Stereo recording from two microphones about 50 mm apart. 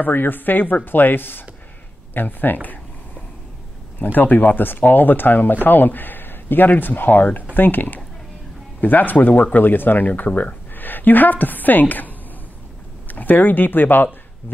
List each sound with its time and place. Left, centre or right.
0.0 s speech: left
2.1 s a sound: left
4.0 s speech: left
13.1 s speech: left